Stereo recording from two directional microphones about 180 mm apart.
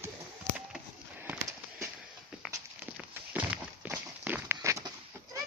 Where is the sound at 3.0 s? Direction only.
10° right (ahead or behind).